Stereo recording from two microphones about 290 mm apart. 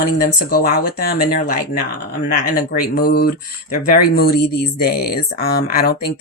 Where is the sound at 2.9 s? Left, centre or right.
Left.